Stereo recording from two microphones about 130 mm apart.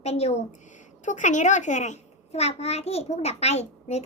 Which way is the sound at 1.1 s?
70° left (ahead or behind).